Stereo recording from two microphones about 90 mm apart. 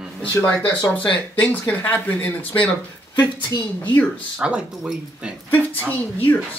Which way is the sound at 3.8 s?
20° left (ahead or behind).